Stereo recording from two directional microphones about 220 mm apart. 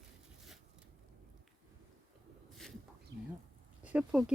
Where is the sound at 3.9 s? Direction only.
5° right (ahead or behind).